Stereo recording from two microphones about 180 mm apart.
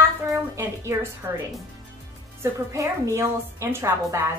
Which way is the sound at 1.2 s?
20° right (ahead or behind).